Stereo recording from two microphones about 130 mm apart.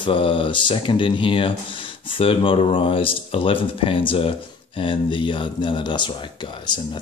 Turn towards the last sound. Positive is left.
turn(degrees=35)  # may be behind; listen again after turning